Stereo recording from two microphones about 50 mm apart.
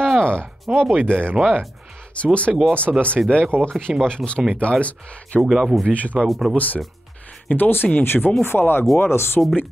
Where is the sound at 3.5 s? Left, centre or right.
Right.